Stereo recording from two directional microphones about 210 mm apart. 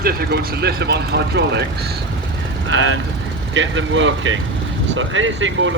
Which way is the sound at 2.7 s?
65° right (ahead or behind).